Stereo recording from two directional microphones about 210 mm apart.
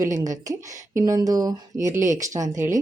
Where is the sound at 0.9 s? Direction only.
15° right (ahead or behind).